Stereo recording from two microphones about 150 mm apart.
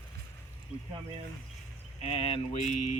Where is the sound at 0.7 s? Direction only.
10° right (ahead or behind).